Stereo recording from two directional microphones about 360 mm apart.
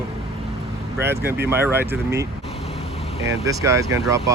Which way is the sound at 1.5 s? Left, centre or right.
Centre.